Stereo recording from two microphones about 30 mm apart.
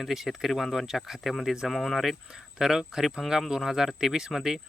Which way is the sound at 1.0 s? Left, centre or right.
Centre.